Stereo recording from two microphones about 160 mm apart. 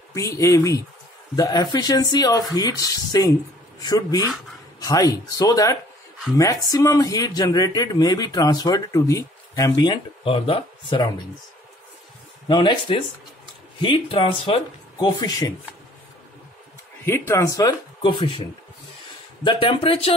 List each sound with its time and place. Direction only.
0.1 s speech: 20° left (ahead or behind)
12.4 s speech: 25° left (ahead or behind)
17.0 s speech: 15° left (ahead or behind); by 20.2 s 35° left (ahead or behind)